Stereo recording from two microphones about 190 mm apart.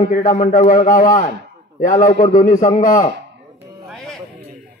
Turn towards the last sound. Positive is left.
turn(degrees=0)  # may be behind; listen again after turning